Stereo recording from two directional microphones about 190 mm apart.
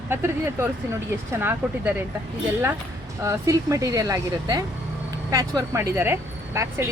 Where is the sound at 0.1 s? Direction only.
10° right (ahead or behind).